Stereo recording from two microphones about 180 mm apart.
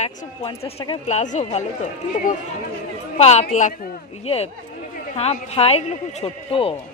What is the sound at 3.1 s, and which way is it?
Speech, 35° left (ahead or behind).